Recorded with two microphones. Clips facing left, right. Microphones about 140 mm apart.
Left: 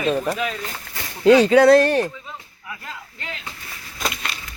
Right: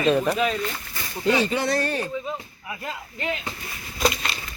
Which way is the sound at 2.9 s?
10° right (ahead or behind).